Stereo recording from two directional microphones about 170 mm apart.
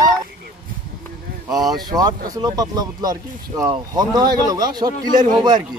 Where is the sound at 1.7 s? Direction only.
25° right (ahead or behind).